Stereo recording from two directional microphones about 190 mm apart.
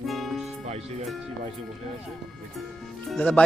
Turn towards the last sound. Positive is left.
turn(degrees=5)  # may be behind; listen again after turning